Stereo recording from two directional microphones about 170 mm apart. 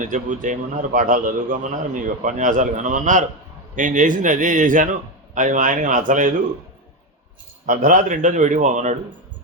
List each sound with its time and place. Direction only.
0.0 s a man's voice: 50° right (ahead or behind)
7.7 s a man's voice: 50° right (ahead or behind)